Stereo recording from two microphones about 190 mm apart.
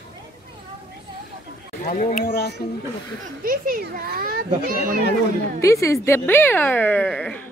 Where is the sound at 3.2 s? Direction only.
50° right (ahead or behind).